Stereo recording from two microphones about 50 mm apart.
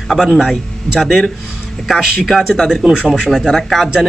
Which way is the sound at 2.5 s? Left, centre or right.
Centre.